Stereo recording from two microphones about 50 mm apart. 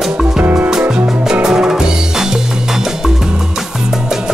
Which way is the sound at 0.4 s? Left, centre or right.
Right.